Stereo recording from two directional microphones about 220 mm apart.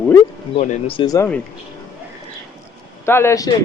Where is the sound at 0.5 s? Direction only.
30° left (ahead or behind); by 1.4 s 15° left (ahead or behind).